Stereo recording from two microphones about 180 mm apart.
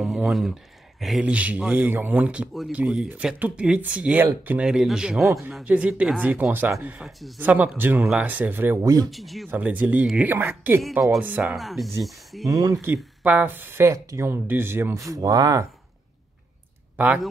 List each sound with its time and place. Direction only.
0.0 s a sound: centre (ahead or behind)
1.0 s speech: 5° right (ahead or behind); by 9.1 s 20° right (ahead or behind)
9.1 s speech: centre (ahead or behind)
12.4 s speech: 20° right (ahead or behind)
12.8 s speech: 10° right (ahead or behind)
16.9 s speech: 10° right (ahead or behind)